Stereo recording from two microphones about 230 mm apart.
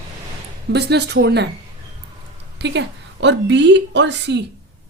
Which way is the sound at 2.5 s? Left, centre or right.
Right.